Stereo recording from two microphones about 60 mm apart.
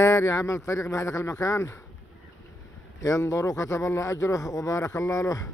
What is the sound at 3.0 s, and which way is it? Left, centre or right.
Speech, left.